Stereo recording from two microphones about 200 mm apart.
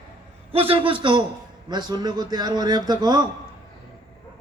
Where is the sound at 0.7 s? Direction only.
25° right (ahead or behind).